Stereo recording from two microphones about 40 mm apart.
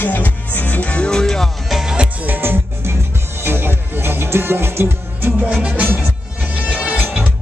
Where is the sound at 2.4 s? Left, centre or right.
Right.